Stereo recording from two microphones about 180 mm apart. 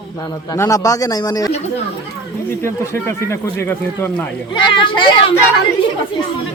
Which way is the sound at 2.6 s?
15° left (ahead or behind).